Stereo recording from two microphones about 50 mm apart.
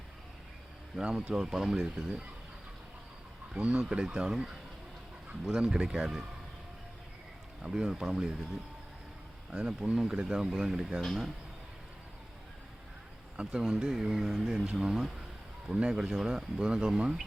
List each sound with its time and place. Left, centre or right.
1.0 s speech: right
1.4 s speech: centre
3.5 s speech: centre
7.6 s speech: centre
9.5 s speech: right
13.3 s speech: centre